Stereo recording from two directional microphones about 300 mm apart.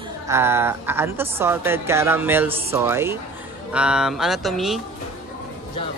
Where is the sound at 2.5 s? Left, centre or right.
Centre.